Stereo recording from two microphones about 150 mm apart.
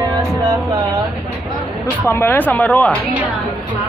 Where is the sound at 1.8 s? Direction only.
15° left (ahead or behind).